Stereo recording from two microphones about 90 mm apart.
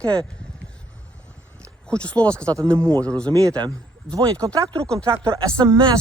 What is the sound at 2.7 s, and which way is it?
Speech, 35° right (ahead or behind).